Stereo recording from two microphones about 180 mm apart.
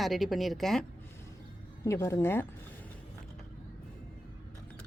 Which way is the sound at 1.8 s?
15° left (ahead or behind).